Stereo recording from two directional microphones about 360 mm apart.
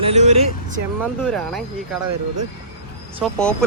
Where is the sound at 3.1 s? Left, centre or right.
Centre.